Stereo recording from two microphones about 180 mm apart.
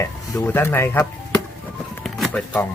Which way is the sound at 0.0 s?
10° left (ahead or behind).